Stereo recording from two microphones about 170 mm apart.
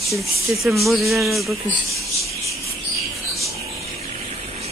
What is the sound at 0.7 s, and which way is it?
Speech, centre (ahead or behind).